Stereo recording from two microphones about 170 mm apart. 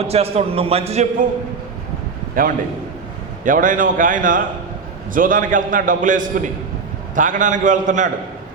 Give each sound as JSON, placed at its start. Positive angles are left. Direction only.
{"t": 0.0, "sound": "a man's voice", "side_deg": -35}
{"t": 2.4, "sound": "a man's voice", "side_deg": -55}